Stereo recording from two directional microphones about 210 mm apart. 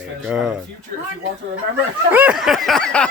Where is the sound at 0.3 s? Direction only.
5° right (ahead or behind).